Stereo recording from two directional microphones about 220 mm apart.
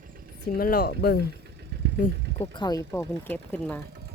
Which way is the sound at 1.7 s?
50° right (ahead or behind).